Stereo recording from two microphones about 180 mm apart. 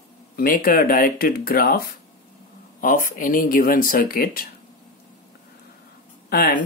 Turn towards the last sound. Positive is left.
turn(degrees=55)  # may be behind; listen again after turning